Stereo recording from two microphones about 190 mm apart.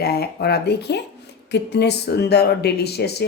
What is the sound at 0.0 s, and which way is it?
A woman's voice, 55° left (ahead or behind).